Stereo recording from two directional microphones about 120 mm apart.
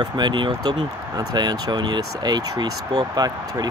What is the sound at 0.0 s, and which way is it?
Speech, 40° right (ahead or behind).